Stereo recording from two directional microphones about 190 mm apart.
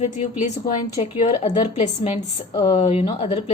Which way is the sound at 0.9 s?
30° left (ahead or behind).